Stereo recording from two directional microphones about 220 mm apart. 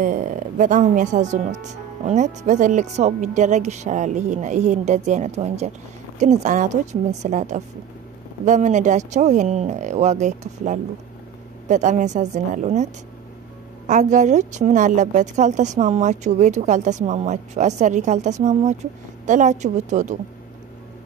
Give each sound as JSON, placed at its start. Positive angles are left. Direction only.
{"t": 0.0, "sound": "a woman's voice", "side_deg": -35}
{"t": 13.8, "sound": "a woman's voice", "side_deg": -35}